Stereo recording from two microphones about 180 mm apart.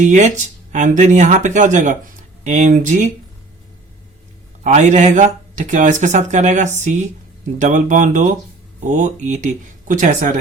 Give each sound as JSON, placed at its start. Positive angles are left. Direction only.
{"t": 0.0, "sound": "speech", "side_deg": -45}
{"t": 4.6, "sound": "speech", "side_deg": -40}